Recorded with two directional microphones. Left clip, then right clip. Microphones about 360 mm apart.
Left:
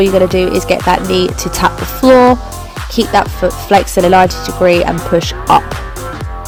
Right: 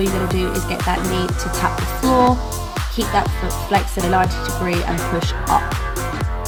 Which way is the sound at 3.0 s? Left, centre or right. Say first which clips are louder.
Left 9 dB; left.